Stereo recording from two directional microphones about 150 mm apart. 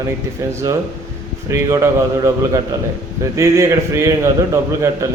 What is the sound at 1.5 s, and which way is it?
A man's voice, 20° right (ahead or behind).